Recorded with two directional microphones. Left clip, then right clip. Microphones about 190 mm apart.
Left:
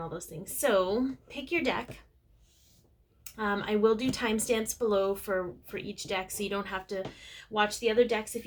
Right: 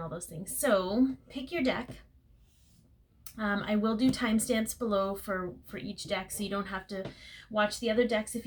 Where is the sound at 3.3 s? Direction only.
35° left (ahead or behind).